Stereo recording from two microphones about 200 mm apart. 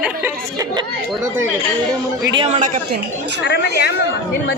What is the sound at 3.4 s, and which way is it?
Speech, 60° left (ahead or behind).